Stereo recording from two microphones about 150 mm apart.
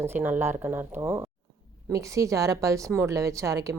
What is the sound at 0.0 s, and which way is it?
A woman's voice, 15° right (ahead or behind).